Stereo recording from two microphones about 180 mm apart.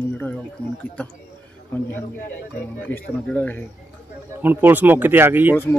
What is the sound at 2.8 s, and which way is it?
Speech, 10° left (ahead or behind).